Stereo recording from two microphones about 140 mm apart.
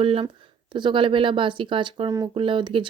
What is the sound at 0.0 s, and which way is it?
Speech, 40° right (ahead or behind).